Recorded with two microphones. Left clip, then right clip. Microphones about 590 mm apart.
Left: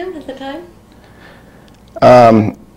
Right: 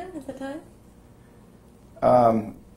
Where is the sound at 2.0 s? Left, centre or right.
Left.